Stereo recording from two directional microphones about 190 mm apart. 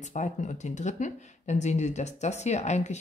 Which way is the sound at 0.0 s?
40° left (ahead or behind).